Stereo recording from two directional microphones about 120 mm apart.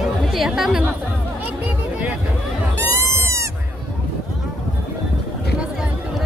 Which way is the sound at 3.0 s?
25° right (ahead or behind).